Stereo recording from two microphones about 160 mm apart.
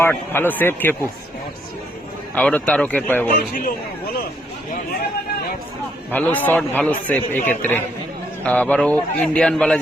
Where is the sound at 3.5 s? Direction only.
65° left (ahead or behind).